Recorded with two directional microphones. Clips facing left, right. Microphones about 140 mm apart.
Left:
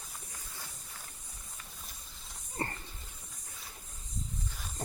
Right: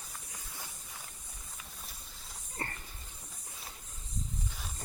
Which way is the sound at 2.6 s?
35° left (ahead or behind).